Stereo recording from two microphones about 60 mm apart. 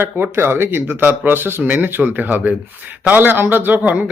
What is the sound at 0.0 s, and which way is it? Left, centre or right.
Speech, right.